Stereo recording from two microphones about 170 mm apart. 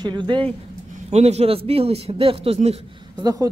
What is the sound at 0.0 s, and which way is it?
Speech, 25° right (ahead or behind).